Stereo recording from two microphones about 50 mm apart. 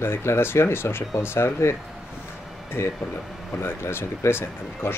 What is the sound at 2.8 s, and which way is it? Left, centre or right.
Speech, left.